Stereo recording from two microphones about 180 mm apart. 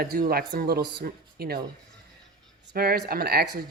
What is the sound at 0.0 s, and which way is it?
Speech, 55° right (ahead or behind).